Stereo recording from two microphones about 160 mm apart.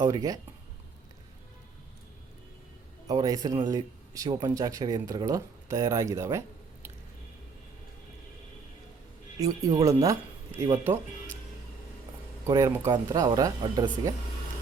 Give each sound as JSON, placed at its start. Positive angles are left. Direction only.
{"t": 0.0, "sound": "a man's voice", "side_deg": -20}
{"t": 3.1, "sound": "a man's voice", "side_deg": -20}
{"t": 9.4, "sound": "a man's voice", "side_deg": -20}
{"t": 12.5, "sound": "a man's voice", "side_deg": -20}